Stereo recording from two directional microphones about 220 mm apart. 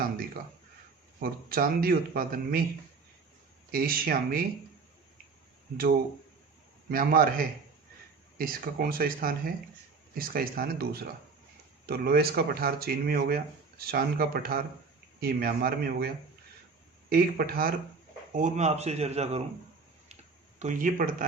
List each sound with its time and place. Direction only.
1.2 s speech: 40° right (ahead or behind)
3.7 s speech: 40° right (ahead or behind)
6.8 s speech: 40° right (ahead or behind)
20.6 s speech: 35° right (ahead or behind)